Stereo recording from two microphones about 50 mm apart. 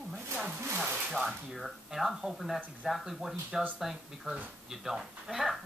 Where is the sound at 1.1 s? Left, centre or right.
Centre.